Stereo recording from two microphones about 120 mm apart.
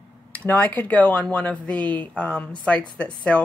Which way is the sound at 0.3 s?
15° left (ahead or behind).